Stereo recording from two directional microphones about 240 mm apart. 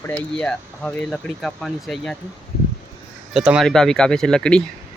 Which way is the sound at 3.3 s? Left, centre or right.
Centre.